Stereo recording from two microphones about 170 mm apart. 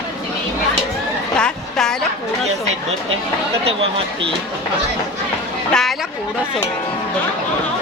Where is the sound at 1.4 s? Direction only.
5° left (ahead or behind).